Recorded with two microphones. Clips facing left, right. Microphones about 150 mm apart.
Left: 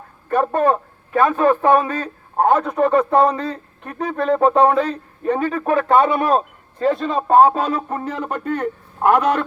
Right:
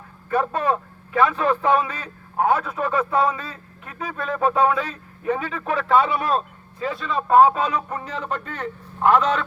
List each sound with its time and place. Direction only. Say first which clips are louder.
1.1 s a man's voice: left 4 dB; 45° left (ahead or behind)